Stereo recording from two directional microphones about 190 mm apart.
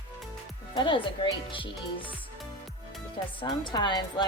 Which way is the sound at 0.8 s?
25° left (ahead or behind).